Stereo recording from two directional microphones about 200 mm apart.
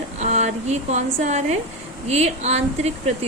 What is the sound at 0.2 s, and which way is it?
Speech, 35° right (ahead or behind).